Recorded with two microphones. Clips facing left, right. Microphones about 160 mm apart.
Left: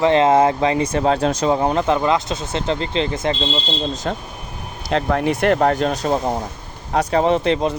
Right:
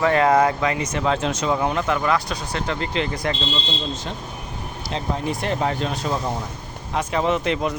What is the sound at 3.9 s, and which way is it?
Speech, 45° left (ahead or behind).